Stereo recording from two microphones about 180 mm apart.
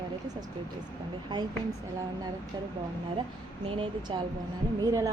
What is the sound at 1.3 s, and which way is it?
Speech, 25° right (ahead or behind).